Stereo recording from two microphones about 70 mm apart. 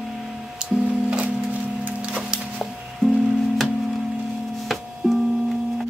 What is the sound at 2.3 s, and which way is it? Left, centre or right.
Music, centre.